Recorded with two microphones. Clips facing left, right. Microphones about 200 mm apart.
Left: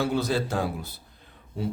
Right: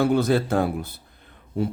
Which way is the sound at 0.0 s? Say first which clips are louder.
Right 6 dB; 55° right (ahead or behind).